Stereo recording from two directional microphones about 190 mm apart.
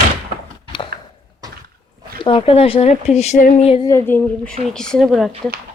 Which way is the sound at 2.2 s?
30° left (ahead or behind).